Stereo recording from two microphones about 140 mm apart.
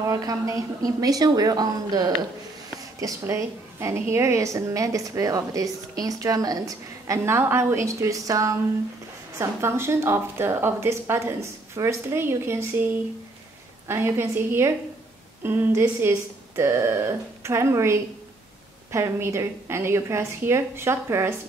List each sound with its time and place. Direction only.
0.0 s a woman's voice: 25° right (ahead or behind)